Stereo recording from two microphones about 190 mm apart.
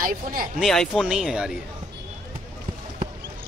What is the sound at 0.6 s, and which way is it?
Speech, centre (ahead or behind).